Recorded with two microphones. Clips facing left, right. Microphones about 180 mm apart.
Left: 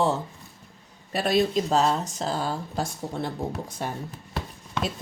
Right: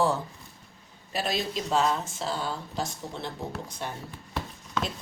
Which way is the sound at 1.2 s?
60° left (ahead or behind).